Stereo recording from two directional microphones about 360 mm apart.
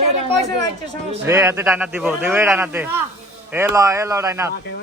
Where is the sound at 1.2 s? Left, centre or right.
Centre.